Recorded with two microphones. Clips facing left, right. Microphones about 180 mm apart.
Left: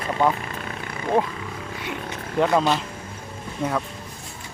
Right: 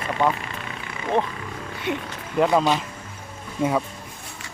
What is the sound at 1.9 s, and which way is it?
Speech, 20° right (ahead or behind).